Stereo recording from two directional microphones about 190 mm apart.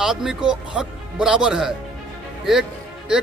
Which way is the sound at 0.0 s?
Centre (ahead or behind).